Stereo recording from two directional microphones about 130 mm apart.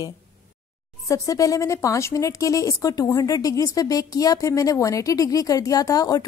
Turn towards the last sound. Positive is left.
turn(degrees=30)  # may be behind; listen again after turning